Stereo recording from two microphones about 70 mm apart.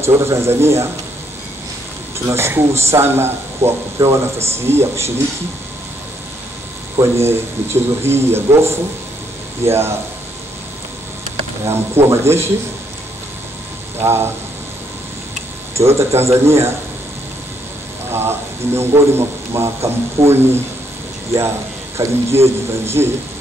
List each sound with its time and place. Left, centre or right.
0.0 s speech: right
2.2 s speech: right
7.0 s speech: right
11.6 s speech: right
14.0 s speech: right
15.7 s speech: right
18.1 s speech: right
21.9 s speech: right